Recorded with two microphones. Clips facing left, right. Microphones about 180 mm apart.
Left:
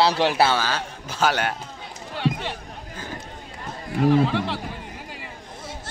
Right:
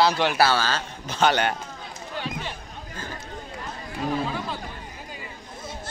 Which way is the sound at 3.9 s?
70° left (ahead or behind).